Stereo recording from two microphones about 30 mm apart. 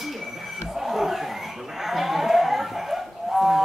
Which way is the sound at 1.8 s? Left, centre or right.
Centre.